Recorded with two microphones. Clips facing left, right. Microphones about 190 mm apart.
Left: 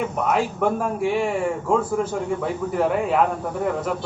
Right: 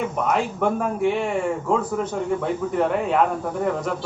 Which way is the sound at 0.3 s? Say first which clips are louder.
Left 1 dB; 5° left (ahead or behind).